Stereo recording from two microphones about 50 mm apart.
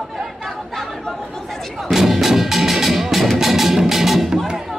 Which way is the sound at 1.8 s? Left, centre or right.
Centre.